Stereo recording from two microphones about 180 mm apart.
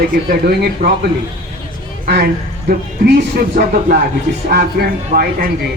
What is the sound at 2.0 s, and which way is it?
Speech, 60° right (ahead or behind).